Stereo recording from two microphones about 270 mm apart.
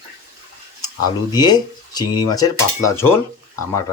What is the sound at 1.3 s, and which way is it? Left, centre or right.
Speech, centre.